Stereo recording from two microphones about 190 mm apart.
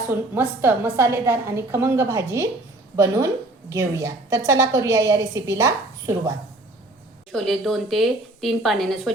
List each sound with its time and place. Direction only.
0.1 s a woman's voice: 10° right (ahead or behind)
7.3 s speech: centre (ahead or behind)